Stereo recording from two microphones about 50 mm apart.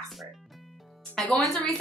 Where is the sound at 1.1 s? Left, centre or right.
Centre.